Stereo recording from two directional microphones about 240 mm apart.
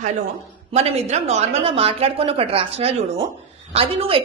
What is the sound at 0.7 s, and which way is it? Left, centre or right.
A woman's voice, right.